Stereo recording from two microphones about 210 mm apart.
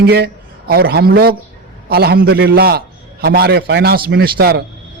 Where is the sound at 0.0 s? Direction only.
50° right (ahead or behind).